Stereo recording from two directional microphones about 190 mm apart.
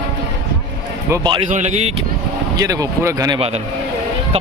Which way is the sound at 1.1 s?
20° right (ahead or behind).